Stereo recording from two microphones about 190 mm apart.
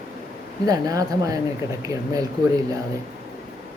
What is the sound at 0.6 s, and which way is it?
Speech, 20° right (ahead or behind).